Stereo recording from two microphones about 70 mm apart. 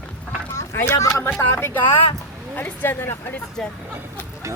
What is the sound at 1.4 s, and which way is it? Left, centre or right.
A woman's voice, left.